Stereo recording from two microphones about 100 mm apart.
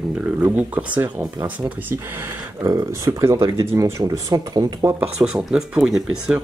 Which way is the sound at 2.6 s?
35° right (ahead or behind).